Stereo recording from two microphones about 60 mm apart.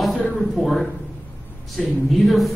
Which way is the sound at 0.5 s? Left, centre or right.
Centre.